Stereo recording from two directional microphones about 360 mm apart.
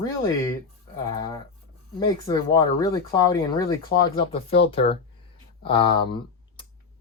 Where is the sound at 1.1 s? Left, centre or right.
Centre.